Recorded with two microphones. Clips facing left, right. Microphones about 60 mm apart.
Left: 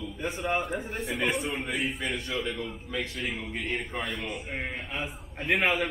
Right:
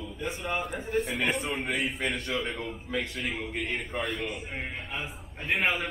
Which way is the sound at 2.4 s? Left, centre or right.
Right.